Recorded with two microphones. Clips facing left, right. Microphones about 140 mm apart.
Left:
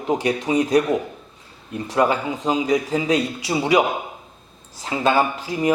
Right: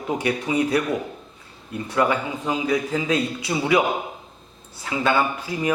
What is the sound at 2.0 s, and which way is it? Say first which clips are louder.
A man's voice: left 2 dB; 25° left (ahead or behind).